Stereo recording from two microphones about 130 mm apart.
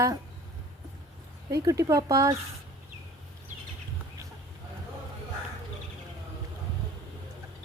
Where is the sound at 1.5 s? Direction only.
25° right (ahead or behind).